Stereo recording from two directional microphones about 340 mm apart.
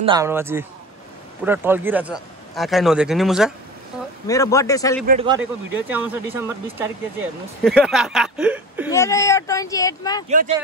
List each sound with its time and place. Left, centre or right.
0.0 s a man's voice: centre
4.3 s speech: centre
5.0 s a man's voice: centre
5.4 s speech: centre
8.9 s speech: centre